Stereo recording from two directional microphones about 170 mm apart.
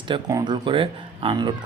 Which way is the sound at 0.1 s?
25° right (ahead or behind).